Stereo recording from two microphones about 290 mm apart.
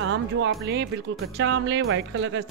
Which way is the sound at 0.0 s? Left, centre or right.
Right.